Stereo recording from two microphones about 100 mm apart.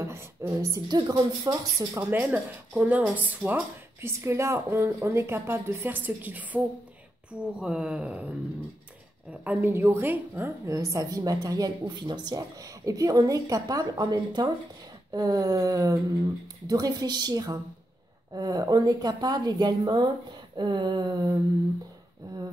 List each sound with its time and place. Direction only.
0.0 s speech: 30° right (ahead or behind); by 8.3 s 10° right (ahead or behind)
9.4 s a woman's voice: 15° right (ahead or behind); by 21.4 s 45° right (ahead or behind)